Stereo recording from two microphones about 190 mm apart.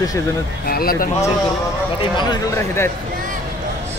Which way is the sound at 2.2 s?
20° left (ahead or behind).